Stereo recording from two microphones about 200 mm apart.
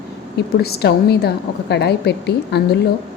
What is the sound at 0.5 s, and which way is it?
A woman's voice, 50° left (ahead or behind).